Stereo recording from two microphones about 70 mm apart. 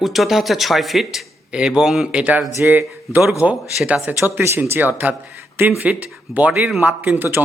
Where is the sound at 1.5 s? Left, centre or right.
Centre.